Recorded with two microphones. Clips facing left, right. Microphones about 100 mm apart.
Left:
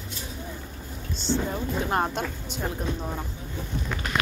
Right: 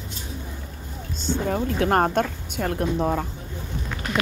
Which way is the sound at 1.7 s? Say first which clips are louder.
Right 6 dB; 65° right (ahead or behind).